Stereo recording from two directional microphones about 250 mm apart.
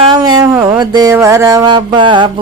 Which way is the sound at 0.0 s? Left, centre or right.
Centre.